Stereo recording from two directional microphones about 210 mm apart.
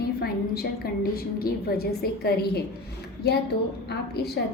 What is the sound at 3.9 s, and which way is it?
Speech, 50° left (ahead or behind).